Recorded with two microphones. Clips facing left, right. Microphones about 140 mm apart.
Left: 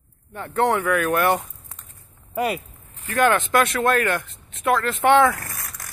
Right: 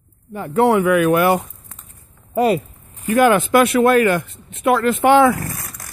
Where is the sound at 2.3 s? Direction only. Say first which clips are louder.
Right 8 dB; 30° right (ahead or behind).